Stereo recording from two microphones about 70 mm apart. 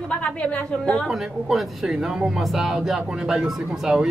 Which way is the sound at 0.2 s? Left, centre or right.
Centre.